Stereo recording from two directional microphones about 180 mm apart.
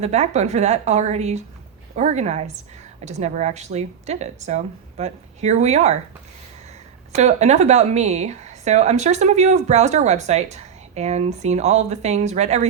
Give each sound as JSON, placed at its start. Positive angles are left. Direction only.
{"t": 0.0, "sound": "a woman's voice", "side_deg": -40}
{"t": 7.1, "sound": "a woman's voice", "side_deg": -40}